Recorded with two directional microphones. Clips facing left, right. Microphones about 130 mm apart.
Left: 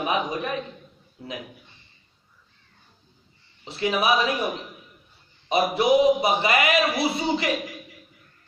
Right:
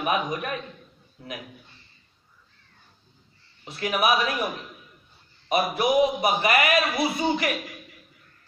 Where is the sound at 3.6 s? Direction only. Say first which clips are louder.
Left 1 dB; 25° left (ahead or behind).